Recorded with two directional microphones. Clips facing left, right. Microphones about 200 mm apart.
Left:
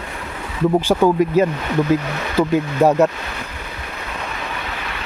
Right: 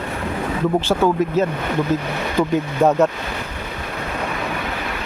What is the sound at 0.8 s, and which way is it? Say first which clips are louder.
Speech: left 2 dB; 15° left (ahead or behind).